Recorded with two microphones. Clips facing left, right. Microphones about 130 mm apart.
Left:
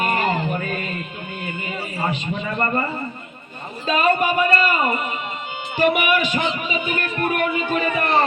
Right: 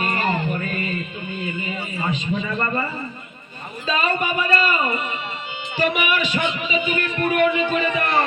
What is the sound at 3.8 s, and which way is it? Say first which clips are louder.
A man's voice: left 4 dB; 50° left (ahead or behind).